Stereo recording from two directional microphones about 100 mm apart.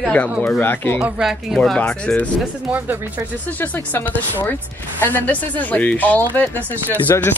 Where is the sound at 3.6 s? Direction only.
20° left (ahead or behind).